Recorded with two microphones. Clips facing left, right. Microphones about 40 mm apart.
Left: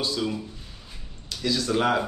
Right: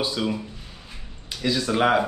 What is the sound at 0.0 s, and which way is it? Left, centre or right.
Speech, right.